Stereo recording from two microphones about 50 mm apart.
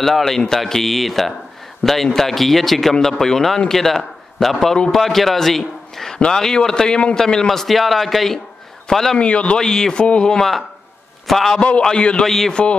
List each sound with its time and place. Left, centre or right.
0.0 s a man's voice: centre
9.2 s speech: left
11.2 s speech: centre
11.8 s speech: centre